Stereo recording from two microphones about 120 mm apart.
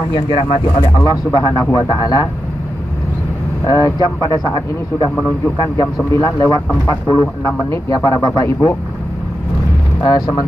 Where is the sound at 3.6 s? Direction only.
30° left (ahead or behind).